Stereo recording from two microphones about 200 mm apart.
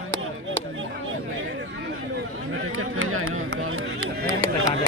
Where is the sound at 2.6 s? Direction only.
90° right.